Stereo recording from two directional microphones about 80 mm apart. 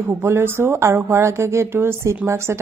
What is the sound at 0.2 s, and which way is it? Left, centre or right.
A woman's voice, right.